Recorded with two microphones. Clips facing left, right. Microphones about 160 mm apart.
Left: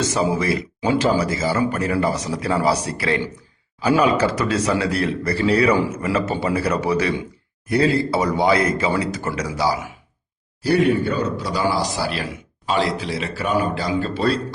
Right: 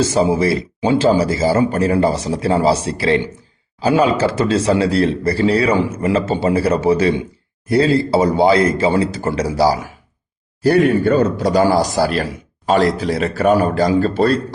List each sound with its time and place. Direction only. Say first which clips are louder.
0.0 s a man's voice: right 5 dB; 30° right (ahead or behind)
10.6 s a man's voice: right 4 dB; 50° right (ahead or behind)